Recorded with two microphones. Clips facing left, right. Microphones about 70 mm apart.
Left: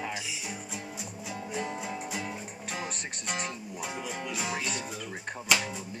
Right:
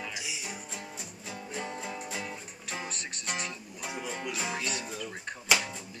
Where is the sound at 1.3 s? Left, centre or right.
Centre.